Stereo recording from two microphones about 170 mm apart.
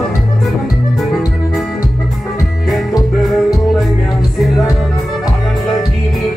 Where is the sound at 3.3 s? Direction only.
Centre (ahead or behind).